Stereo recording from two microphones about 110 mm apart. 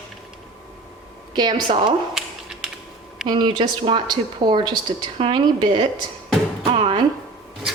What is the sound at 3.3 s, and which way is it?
Speech, 45° right (ahead or behind).